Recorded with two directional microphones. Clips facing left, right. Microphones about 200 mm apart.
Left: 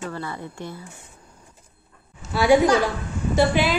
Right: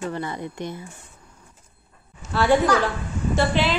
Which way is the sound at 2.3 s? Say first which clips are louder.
Left 2 dB; 10° left (ahead or behind).